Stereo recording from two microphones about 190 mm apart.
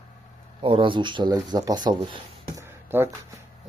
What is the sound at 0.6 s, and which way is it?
Speech, 25° right (ahead or behind).